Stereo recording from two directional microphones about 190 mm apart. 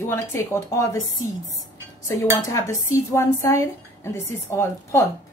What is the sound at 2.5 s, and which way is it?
A woman's voice, 15° left (ahead or behind).